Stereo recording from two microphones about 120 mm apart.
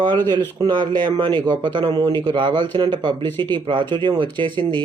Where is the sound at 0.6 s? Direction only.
35° right (ahead or behind).